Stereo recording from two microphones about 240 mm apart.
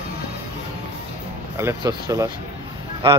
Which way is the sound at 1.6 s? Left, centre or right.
Centre.